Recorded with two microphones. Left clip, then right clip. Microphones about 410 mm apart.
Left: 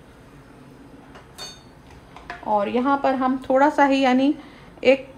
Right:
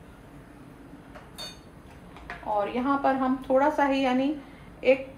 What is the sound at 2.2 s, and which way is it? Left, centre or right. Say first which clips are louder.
A woman's voice: left 6 dB; left.